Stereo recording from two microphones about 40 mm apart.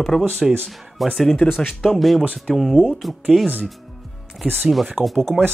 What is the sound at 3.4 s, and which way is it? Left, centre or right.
Speech, right.